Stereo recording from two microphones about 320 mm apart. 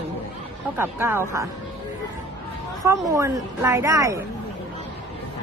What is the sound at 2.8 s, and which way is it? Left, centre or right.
A woman's voice, centre.